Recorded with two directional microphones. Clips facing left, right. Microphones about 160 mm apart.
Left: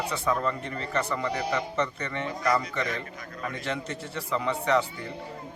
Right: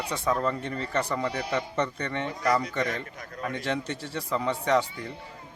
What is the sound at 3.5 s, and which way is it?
A man's voice, 35° right (ahead or behind).